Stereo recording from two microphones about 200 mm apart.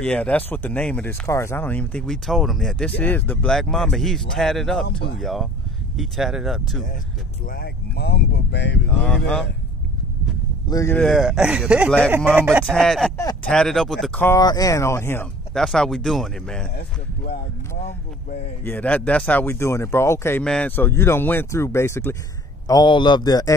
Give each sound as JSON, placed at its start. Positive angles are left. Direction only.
{"t": 0.0, "sound": "speech", "side_deg": 5}
{"t": 7.4, "sound": "speech", "side_deg": 50}
{"t": 9.0, "sound": "speech", "side_deg": 5}
{"t": 10.7, "sound": "speech", "side_deg": 15}
{"t": 11.0, "sound": "speech", "side_deg": 0}
{"t": 14.2, "sound": "speech", "side_deg": 15}
{"t": 16.7, "sound": "speech", "side_deg": 45}
{"t": 18.6, "sound": "speech", "side_deg": 10}